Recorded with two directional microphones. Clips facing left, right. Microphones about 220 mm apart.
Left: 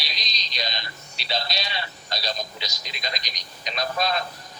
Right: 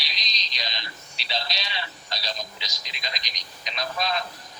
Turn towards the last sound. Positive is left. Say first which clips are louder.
# left 3 dB
turn(degrees=45)  # may be behind; listen again after turning